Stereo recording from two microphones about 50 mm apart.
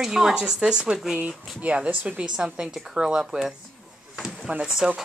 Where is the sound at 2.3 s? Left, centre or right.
Centre.